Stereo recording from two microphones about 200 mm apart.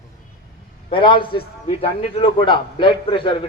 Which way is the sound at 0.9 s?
25° left (ahead or behind).